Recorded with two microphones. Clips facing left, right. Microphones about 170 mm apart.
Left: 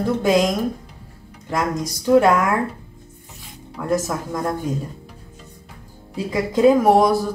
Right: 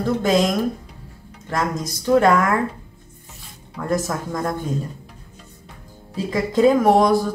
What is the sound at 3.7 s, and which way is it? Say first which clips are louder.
Music: left 1 dB; 5° left (ahead or behind).